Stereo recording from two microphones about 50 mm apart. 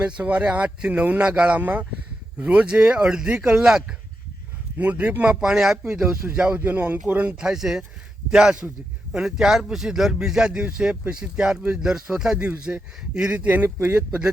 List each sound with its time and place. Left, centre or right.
0.0 s speech: right
4.8 s speech: right
6.6 s speech: right
7.1 s speech: right
12.7 s speech: right
13.6 s speech: right